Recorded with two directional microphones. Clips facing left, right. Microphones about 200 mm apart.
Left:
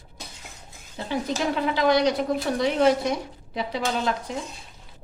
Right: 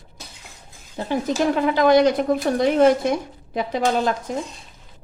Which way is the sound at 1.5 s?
50° right (ahead or behind).